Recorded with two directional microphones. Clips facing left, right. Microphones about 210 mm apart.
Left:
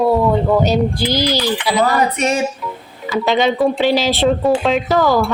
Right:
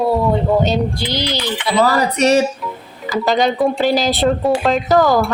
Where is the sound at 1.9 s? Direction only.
35° right (ahead or behind).